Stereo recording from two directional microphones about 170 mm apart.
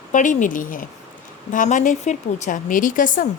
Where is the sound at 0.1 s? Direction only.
50° left (ahead or behind).